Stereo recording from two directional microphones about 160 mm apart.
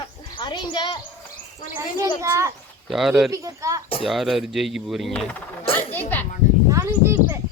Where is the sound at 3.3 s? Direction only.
20° right (ahead or behind).